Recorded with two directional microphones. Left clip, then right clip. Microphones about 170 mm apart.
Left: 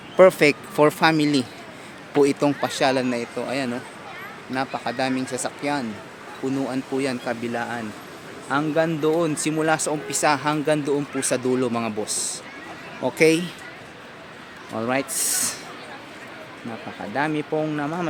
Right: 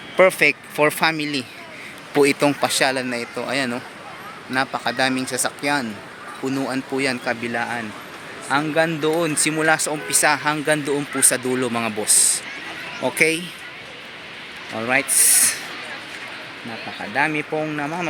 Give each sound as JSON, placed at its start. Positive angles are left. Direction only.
{"t": 0.2, "sound": "speech", "side_deg": 25}
{"t": 14.7, "sound": "speech", "side_deg": 20}
{"t": 17.2, "sound": "speech", "side_deg": 25}